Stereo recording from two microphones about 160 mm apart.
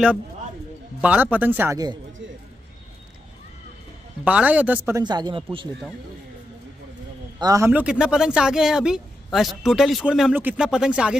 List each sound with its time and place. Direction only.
1.0 s speech: 10° right (ahead or behind)
4.2 s speech: 10° right (ahead or behind)
5.0 s speech: 25° right (ahead or behind)
7.3 s a man's voice: 20° right (ahead or behind)
7.8 s speech: 5° right (ahead or behind)